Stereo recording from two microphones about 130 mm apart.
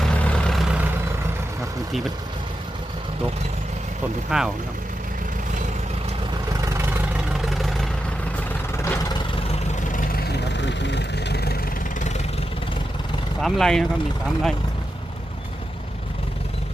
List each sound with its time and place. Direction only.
0.0 s vehicle: 10° left (ahead or behind)
4.3 s speech: 5° right (ahead or behind)
6.5 s vehicle: 25° right (ahead or behind)
7.3 s vehicle: centre (ahead or behind)
8.7 s vehicle: 20° left (ahead or behind)
9.8 s vehicle: 90° left
11.9 s vehicle: 65° left (ahead or behind)
13.4 s speech: 5° left (ahead or behind)